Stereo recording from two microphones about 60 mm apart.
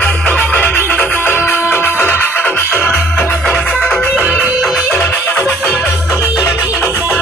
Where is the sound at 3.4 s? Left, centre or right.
Centre.